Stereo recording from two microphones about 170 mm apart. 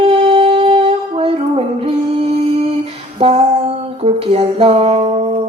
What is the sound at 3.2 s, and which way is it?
Speech, 35° right (ahead or behind).